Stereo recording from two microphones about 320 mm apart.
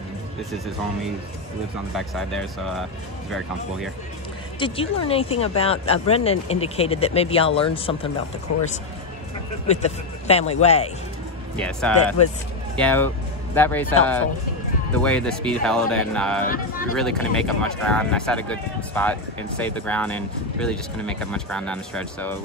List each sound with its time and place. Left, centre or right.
2.0 s speech: centre
4.6 s speech: centre
9.7 s speech: centre
11.5 s speech: centre
15.0 s speech: centre
16.4 s speech: left
16.9 s speech: centre